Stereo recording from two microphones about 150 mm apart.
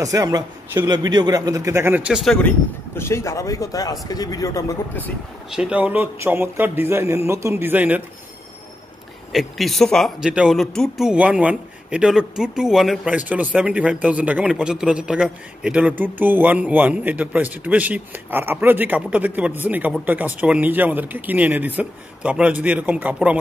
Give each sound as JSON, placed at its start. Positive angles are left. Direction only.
{"t": 0.0, "sound": "a man's voice", "side_deg": -25}
{"t": 2.2, "sound": "speech", "side_deg": 5}
{"t": 3.0, "sound": "speech", "side_deg": 20}
{"t": 5.5, "sound": "speech", "side_deg": -5}
{"t": 9.3, "sound": "speech", "side_deg": 0}